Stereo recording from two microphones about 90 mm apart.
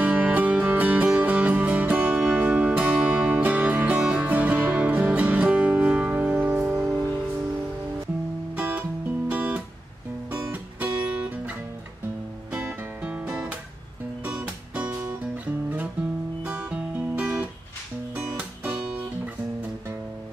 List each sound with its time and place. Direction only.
0.0 s music: 15° right (ahead or behind)
8.5 s music: 20° right (ahead or behind)
9.3 s guitar: 15° right (ahead or behind)
10.3 s music: 25° right (ahead or behind)
11.1 s guitar: 15° right (ahead or behind)
12.5 s music: 10° right (ahead or behind)
16.4 s music: 10° right (ahead or behind)